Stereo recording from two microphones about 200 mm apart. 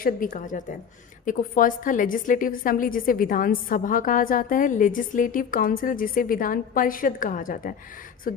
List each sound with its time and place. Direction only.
0.0 s a woman's voice: 40° left (ahead or behind)